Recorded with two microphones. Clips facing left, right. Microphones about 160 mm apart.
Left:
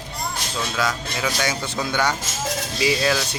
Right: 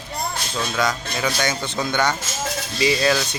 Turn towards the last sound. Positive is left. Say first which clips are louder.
# right 2 dB
turn(degrees=0)  # may be behind; listen again after turning